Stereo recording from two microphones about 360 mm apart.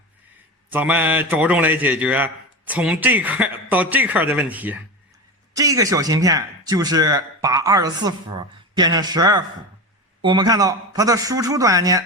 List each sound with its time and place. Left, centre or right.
0.7 s a man's voice: centre